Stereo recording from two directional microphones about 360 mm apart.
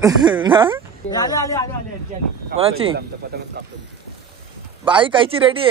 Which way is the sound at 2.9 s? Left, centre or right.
Right.